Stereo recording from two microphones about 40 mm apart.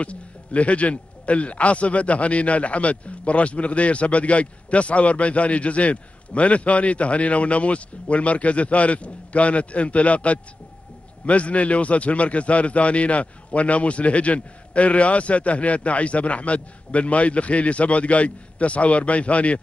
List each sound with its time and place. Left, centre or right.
0.0 s a man's voice: left